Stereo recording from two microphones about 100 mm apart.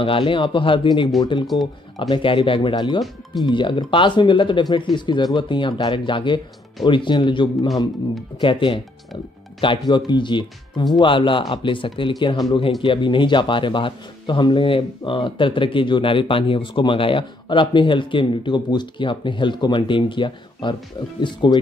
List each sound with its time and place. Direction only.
0.0 s speech: 65° left (ahead or behind)